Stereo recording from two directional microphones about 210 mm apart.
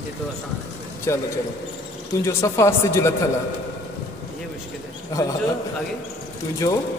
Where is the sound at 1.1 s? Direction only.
15° left (ahead or behind).